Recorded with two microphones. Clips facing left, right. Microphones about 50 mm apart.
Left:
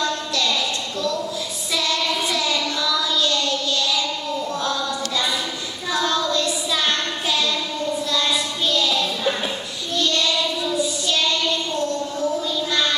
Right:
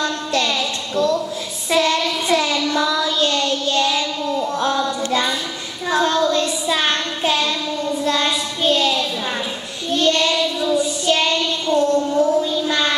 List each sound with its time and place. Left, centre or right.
0.0 s a sound: right
1.7 s child singing: right
9.9 s child singing: right